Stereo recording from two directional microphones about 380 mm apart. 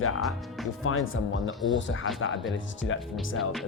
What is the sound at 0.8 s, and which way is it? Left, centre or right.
Speech, left.